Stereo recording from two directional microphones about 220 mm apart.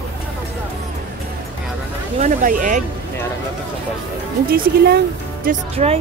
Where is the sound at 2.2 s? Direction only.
40° right (ahead or behind).